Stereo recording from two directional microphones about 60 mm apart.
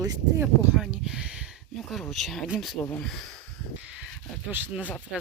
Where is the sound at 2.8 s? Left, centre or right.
Left.